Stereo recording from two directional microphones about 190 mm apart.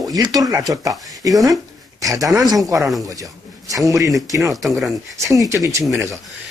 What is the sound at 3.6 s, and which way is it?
Speech, 15° right (ahead or behind).